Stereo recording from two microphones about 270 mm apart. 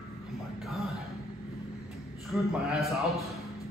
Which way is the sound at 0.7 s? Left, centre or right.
Centre.